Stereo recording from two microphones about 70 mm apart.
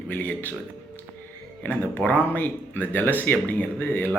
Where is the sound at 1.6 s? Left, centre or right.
Left.